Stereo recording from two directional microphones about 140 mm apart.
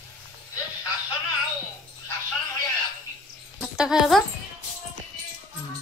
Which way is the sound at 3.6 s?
5° right (ahead or behind).